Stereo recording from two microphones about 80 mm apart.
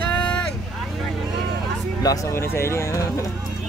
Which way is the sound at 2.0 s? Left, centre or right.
Left.